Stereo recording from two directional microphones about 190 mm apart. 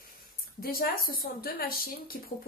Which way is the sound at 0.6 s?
50° left (ahead or behind).